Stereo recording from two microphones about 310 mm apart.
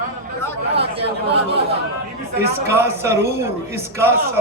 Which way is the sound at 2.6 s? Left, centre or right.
Centre.